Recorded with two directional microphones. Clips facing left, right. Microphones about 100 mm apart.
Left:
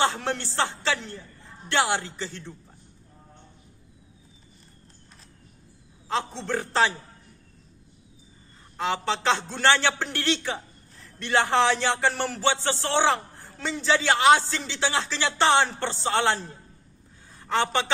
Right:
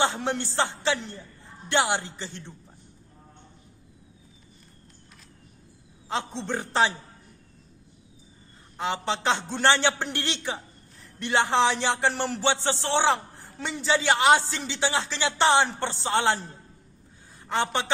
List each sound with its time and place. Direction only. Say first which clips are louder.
0.0 s a man's voice: even; 20° right (ahead or behind)
6.1 s a man's voice: left 2 dB; 20° right (ahead or behind)
8.8 s a man's voice: left 1 dB; 15° right (ahead or behind)